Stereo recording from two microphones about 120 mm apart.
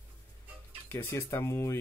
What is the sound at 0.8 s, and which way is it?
Speech, 20° left (ahead or behind).